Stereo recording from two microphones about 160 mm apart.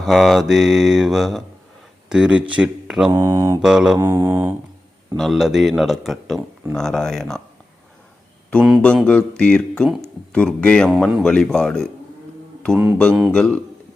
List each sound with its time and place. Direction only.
0.0 s speech: centre (ahead or behind)
3.2 s mantra: 15° right (ahead or behind)
3.6 s speech: 5° right (ahead or behind)
3.9 s mantra: 15° right (ahead or behind)
5.1 s speech: centre (ahead or behind)
8.4 s speech: 5° left (ahead or behind)
12.6 s mantra: 5° left (ahead or behind)
13.0 s speech: 5° left (ahead or behind)